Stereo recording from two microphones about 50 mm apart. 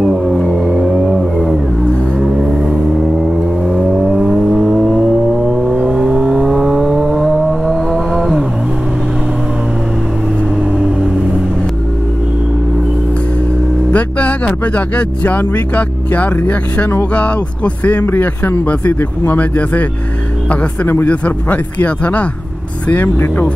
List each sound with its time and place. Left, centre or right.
0.0 s a sound: centre
0.7 s vehicle: centre
2.2 s vehicle: centre
13.9 s music: left
15.0 s speech: left
18.0 s speech: left
21.1 s speech: left
22.8 s speech: left